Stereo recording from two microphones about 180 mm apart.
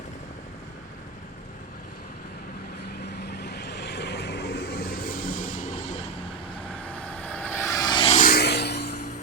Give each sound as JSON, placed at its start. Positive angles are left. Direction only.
{"t": 3.0, "sound": "vehicle", "side_deg": 65}
{"t": 6.8, "sound": "vehicle", "side_deg": 10}
{"t": 8.2, "sound": "a sound", "side_deg": 60}